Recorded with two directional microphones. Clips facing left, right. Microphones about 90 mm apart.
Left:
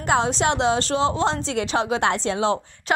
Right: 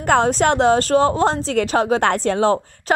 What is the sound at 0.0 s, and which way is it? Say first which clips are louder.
A woman's voice: right 5 dB; 50° right (ahead or behind).